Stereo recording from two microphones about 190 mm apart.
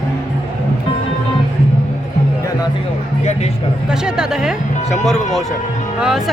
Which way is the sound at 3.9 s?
5° right (ahead or behind).